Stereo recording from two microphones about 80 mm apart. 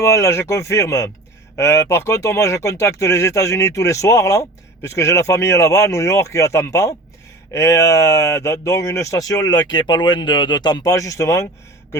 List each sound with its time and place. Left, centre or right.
0.0 s speech: left
10.9 s speech: left